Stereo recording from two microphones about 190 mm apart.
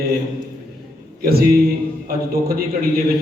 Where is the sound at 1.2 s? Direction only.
55° right (ahead or behind).